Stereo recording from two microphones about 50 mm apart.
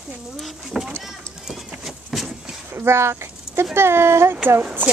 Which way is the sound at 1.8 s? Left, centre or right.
Centre.